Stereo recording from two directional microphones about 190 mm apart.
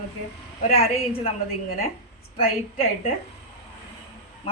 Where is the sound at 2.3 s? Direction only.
30° left (ahead or behind).